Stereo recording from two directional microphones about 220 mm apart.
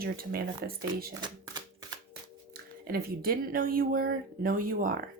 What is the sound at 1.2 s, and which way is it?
Typewriter, 20° right (ahead or behind).